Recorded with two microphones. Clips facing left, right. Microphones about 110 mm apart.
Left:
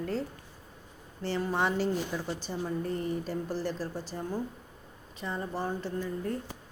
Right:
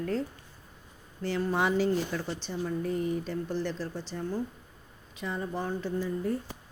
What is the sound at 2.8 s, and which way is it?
Speech, centre (ahead or behind).